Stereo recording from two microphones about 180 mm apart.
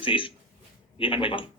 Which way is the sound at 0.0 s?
30° left (ahead or behind).